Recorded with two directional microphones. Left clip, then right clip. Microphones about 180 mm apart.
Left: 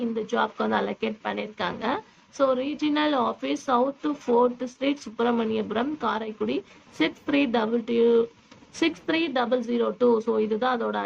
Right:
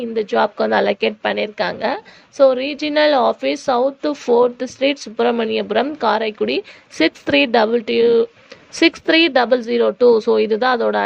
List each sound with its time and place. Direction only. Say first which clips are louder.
0.3 s a woman's voice: right 9 dB; 35° right (ahead or behind)